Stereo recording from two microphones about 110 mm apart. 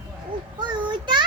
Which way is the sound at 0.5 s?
45° right (ahead or behind).